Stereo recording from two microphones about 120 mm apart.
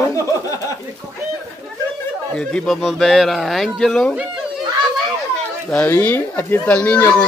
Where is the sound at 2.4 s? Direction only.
5° left (ahead or behind).